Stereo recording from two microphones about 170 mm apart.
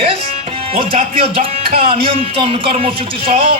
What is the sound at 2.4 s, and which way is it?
Speech, 30° right (ahead or behind).